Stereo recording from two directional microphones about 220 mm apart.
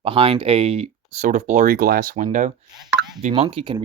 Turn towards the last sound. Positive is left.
turn(degrees=-25)  # may be behind; listen again after turning